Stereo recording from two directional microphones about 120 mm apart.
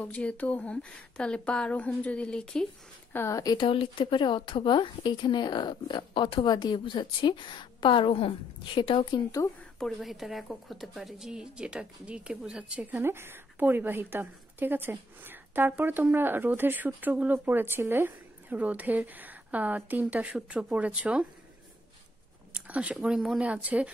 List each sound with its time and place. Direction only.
0.0 s a woman's voice: 10° left (ahead or behind)
3.1 s speech: 20° left (ahead or behind)
3.5 s a woman's voice: 45° left (ahead or behind)
9.8 s a woman's voice: centre (ahead or behind)
12.9 s a woman's voice: 20° right (ahead or behind)
22.5 s a sound: 10° right (ahead or behind)
22.9 s a woman's voice: 5° right (ahead or behind)